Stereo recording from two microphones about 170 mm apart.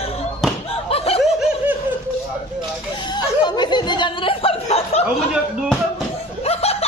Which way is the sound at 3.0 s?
25° left (ahead or behind).